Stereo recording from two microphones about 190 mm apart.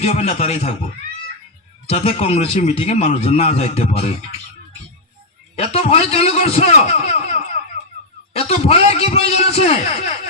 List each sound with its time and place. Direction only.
0.0 s a man's voice: 30° left (ahead or behind)
1.9 s a man's voice: 30° left (ahead or behind)
5.5 s a man's voice: 30° left (ahead or behind)